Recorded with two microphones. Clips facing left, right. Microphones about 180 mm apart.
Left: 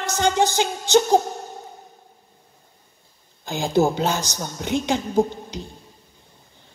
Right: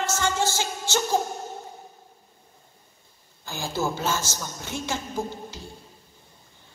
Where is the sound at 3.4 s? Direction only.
20° left (ahead or behind).